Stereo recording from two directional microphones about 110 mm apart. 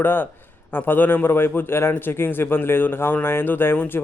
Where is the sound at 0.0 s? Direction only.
20° left (ahead or behind).